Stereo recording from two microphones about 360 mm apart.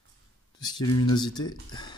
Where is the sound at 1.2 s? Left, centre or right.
Centre.